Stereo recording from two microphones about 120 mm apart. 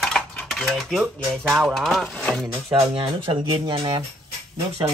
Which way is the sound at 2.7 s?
45° right (ahead or behind).